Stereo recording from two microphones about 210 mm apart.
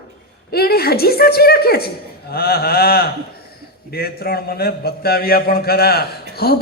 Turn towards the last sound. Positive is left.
turn(degrees=50)  # may be behind; listen again after turning